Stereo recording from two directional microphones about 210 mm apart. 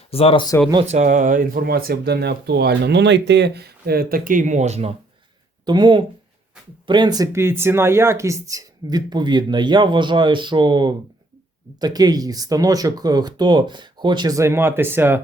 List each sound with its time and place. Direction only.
0.1 s speech: 25° left (ahead or behind)
0.7 s speech: 30° right (ahead or behind); by 15.2 s 10° right (ahead or behind)